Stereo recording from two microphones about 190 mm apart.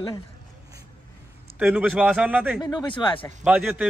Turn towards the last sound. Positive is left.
turn(degrees=-5)  # may be behind; listen again after turning